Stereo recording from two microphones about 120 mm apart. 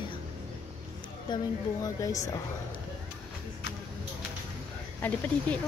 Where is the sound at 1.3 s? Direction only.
30° left (ahead or behind).